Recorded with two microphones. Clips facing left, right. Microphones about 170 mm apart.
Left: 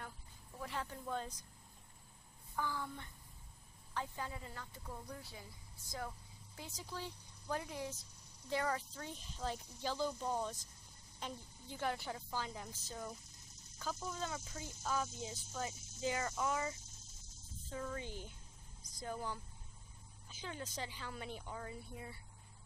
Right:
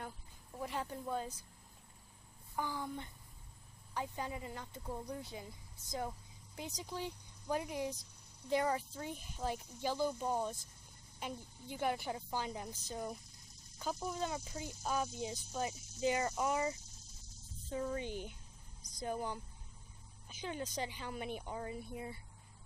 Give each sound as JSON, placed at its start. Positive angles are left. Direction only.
{"t": 0.6, "sound": "speech", "side_deg": -15}
{"t": 2.5, "sound": "speech", "side_deg": -15}